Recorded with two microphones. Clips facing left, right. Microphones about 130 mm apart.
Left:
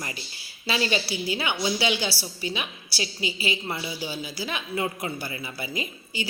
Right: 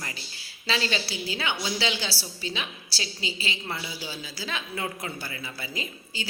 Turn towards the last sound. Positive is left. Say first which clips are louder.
# left 3 dB
turn(degrees=15)  # may be behind; listen again after turning